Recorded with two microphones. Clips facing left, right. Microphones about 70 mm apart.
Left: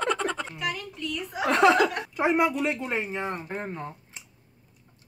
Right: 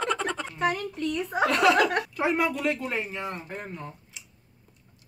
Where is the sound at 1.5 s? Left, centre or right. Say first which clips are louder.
Left 3 dB; left.